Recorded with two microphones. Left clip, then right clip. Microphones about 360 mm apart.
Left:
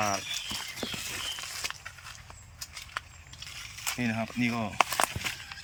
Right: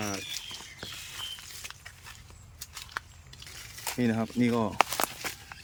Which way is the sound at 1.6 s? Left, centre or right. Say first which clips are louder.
Left 8 dB; centre.